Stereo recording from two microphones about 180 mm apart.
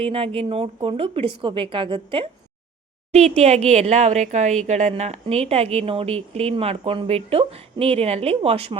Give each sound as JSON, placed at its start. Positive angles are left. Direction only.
{"t": 0.0, "sound": "speech", "side_deg": -30}